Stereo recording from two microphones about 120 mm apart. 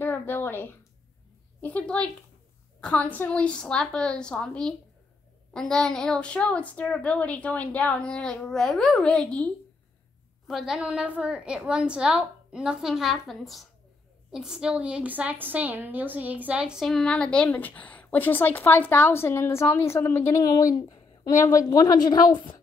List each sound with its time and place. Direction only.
0.0 s a sound: 15° left (ahead or behind)
1.6 s a woman's voice: 10° left (ahead or behind)
10.4 s a woman's voice: centre (ahead or behind); by 22.3 s 35° left (ahead or behind)